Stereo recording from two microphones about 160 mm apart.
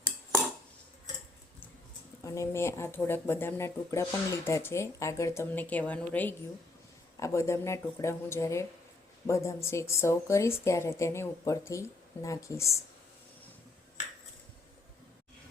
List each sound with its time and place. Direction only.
2.2 s speech: 20° left (ahead or behind)